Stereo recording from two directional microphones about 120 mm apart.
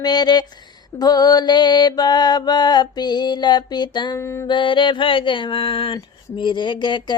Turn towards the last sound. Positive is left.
turn(degrees=40)  # may be behind; listen again after turning